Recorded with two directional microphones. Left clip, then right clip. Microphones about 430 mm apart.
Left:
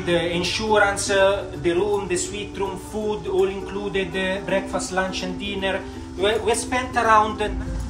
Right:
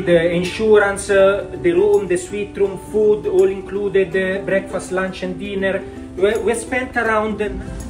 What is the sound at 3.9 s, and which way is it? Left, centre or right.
A man's voice, centre.